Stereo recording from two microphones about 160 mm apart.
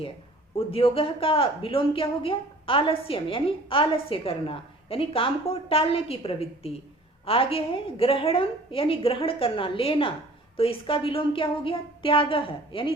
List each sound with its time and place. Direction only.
0.5 s a woman's voice: 35° left (ahead or behind)